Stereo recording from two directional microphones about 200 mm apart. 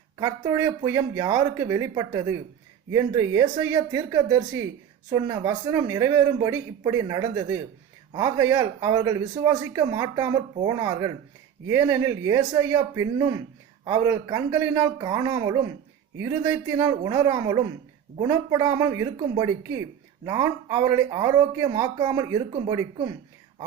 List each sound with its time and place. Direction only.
0.2 s speech: 15° right (ahead or behind)